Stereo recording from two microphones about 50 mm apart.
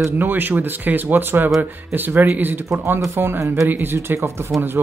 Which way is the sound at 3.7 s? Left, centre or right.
Right.